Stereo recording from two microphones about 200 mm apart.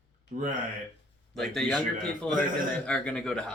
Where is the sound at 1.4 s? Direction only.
5° left (ahead or behind).